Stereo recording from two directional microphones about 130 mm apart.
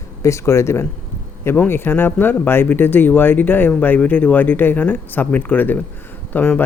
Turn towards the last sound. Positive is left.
turn(degrees=10)  # may be behind; listen again after turning